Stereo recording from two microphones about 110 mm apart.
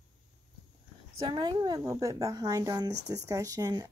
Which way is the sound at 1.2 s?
40° right (ahead or behind).